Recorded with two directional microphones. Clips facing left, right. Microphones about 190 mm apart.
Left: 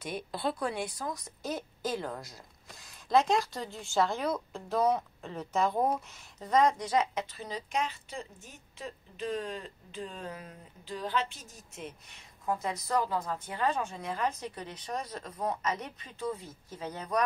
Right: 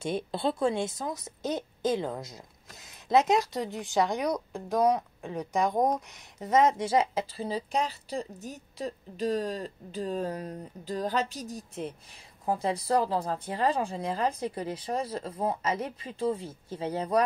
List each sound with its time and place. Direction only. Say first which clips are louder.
0.0 s a woman's voice: right 5 dB; 25° right (ahead or behind)